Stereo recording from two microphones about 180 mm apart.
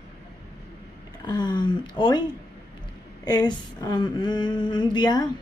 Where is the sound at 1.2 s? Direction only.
25° left (ahead or behind).